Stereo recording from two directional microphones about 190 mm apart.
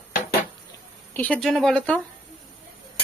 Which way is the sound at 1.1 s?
5° left (ahead or behind).